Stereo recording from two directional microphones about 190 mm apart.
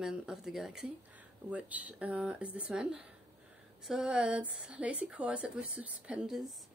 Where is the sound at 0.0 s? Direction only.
5° right (ahead or behind).